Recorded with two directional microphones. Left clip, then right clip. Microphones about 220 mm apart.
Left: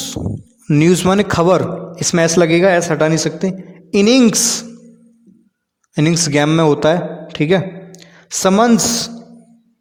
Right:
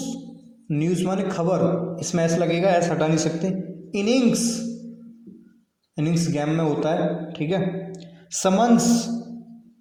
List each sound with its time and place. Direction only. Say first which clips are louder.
0.7 s a man's voice: left 12 dB; 40° left (ahead or behind)
5.9 s a man's voice: left 11 dB; 40° left (ahead or behind)